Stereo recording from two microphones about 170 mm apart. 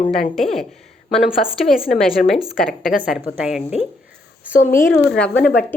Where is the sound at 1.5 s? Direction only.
Centre (ahead or behind).